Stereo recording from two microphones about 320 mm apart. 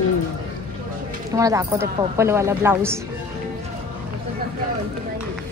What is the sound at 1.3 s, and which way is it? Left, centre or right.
A woman's voice, centre.